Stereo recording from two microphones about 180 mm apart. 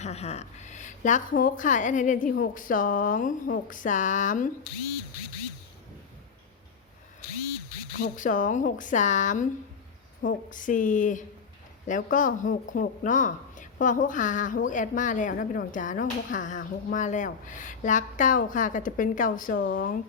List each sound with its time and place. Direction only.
0.0 s speech: 35° left (ahead or behind)
7.9 s speech: 50° left (ahead or behind)
19.5 s speech: 90° left